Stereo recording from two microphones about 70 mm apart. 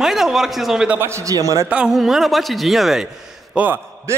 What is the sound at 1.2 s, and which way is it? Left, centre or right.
Speech, right.